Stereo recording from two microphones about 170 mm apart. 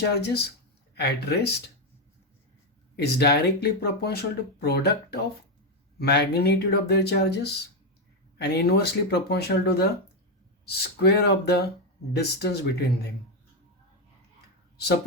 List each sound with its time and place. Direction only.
0.0 s speech: 75° left (ahead or behind)
2.9 s speech: 75° left (ahead or behind)